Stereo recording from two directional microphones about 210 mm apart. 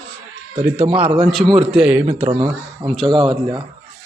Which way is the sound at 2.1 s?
25° right (ahead or behind).